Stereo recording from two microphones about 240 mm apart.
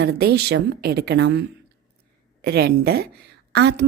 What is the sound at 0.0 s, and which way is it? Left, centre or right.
A woman's voice, right.